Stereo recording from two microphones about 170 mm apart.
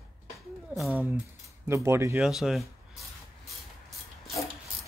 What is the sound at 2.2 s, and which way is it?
Speech, centre (ahead or behind).